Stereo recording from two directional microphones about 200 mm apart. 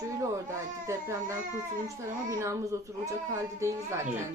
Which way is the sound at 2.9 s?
15° right (ahead or behind).